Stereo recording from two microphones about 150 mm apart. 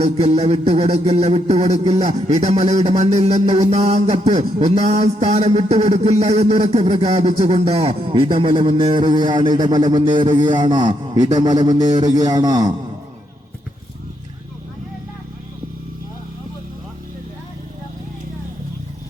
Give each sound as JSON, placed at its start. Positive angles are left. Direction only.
{"t": 0.0, "sound": "a man's voice", "side_deg": -45}